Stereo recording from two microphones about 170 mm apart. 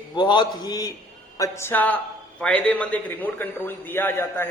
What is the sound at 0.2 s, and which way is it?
A man's voice, 25° left (ahead or behind).